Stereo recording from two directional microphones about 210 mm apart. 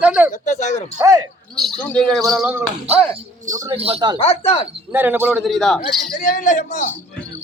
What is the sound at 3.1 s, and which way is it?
Speech, 35° right (ahead or behind).